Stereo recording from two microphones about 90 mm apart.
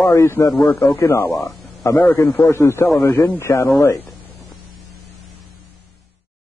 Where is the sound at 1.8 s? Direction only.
30° left (ahead or behind).